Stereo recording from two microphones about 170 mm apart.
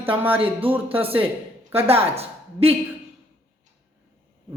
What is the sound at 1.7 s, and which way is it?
A woman's voice, 35° right (ahead or behind).